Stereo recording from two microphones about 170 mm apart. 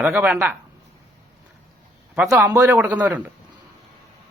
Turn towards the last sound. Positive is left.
turn(degrees=-10)  # may be behind; listen again after turning